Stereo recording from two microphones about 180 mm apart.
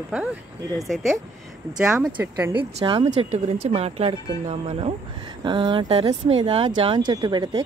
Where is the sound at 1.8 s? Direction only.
5° right (ahead or behind).